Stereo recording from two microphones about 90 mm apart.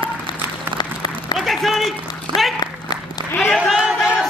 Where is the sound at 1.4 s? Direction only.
Centre (ahead or behind).